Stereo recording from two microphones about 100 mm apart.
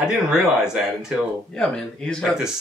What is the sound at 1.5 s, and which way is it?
Speech, 5° left (ahead or behind).